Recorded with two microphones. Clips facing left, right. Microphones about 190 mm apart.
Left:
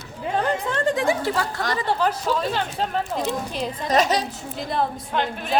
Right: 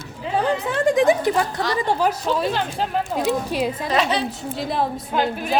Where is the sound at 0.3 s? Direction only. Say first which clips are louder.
Right 3 dB; 10° right (ahead or behind).